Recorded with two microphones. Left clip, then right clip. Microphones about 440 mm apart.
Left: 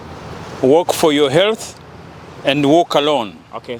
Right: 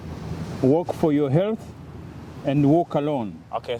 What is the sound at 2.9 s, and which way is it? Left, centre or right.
Speech, centre.